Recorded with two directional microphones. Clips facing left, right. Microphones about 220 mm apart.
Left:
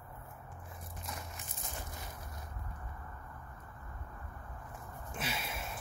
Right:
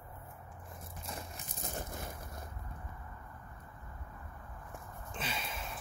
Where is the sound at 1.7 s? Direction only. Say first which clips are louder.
Right 5 dB; 50° right (ahead or behind).